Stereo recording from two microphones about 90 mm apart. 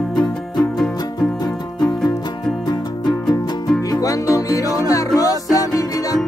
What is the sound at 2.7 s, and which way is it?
Music, 50° left (ahead or behind).